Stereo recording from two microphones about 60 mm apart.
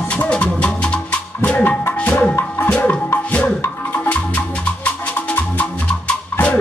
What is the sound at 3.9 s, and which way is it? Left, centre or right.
Music, left.